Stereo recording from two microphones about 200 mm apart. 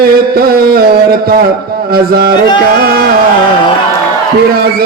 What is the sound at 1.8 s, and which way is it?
Speech, 50° right (ahead or behind).